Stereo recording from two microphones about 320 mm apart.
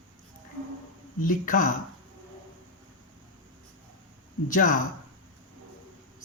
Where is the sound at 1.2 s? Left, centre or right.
Left.